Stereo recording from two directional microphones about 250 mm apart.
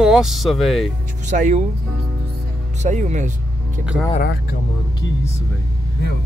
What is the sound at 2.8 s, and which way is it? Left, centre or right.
Speech, right.